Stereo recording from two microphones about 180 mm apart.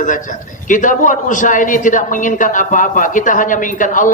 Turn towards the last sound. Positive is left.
turn(degrees=45)  # may be behind; listen again after turning